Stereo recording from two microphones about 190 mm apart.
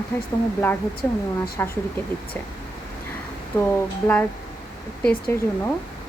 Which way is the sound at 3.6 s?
10° left (ahead or behind).